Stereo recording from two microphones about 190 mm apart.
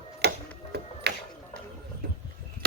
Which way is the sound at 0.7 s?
60° right (ahead or behind).